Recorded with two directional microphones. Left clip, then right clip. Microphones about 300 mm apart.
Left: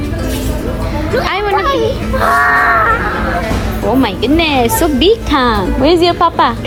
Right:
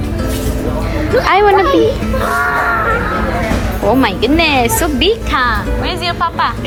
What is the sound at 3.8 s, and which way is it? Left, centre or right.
A woman's voice, centre.